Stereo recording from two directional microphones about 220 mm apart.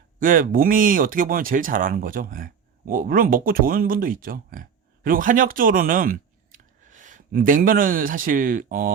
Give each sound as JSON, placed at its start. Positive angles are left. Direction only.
{"t": 0.2, "sound": "speech", "side_deg": -40}